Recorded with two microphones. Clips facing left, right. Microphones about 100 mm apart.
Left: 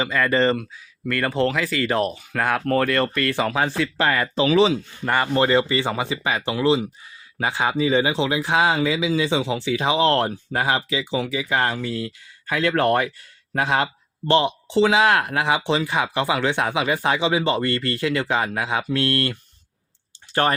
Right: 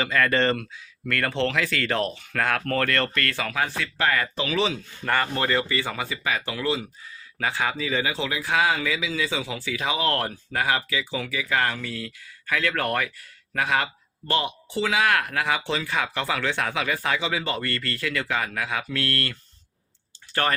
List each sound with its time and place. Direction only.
0.0 s speech: 10° left (ahead or behind)
3.4 s speech: 30° left (ahead or behind)
5.0 s speech: 15° left (ahead or behind)